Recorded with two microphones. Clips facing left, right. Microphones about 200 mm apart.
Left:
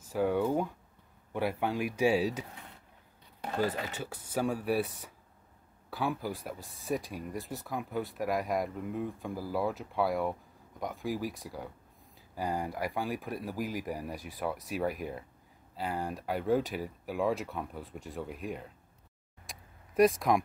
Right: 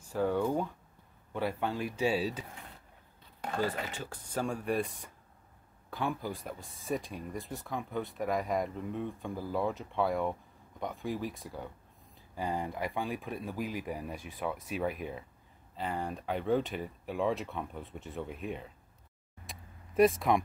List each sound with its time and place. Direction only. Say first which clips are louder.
0.1 s speech: left 1 dB; 10° left (ahead or behind)
4.0 s speech: left 4 dB; 10° left (ahead or behind)
15.0 s speech: left 1 dB; 40° left (ahead or behind)
15.7 s speech: left 1 dB; 5° left (ahead or behind)
19.4 s tick: right 1 dB; centre (ahead or behind)